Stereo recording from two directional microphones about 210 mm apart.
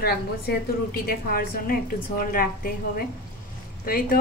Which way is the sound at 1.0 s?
45° left (ahead or behind).